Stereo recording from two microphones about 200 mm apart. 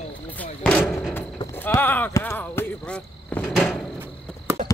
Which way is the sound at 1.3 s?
15° left (ahead or behind).